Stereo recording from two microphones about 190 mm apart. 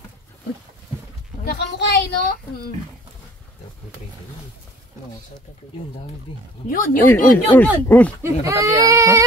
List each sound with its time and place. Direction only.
1.4 s a sound: 60° left (ahead or behind)
6.7 s speech: 45° left (ahead or behind)
7.1 s speech: 10° left (ahead or behind)
8.2 s speech: 15° right (ahead or behind)